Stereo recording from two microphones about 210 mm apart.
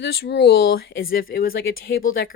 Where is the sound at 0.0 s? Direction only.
55° left (ahead or behind).